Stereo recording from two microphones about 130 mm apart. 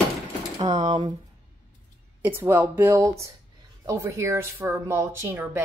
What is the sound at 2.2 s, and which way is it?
A woman's voice, 15° right (ahead or behind).